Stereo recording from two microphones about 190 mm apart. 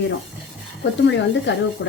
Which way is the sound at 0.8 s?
70° left (ahead or behind).